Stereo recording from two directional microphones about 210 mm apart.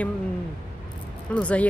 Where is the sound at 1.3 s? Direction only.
5° left (ahead or behind).